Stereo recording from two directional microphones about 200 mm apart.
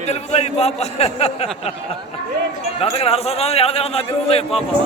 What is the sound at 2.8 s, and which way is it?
A man's voice, 30° left (ahead or behind).